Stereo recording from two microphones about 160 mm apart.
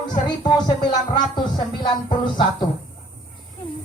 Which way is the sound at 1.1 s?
25° left (ahead or behind).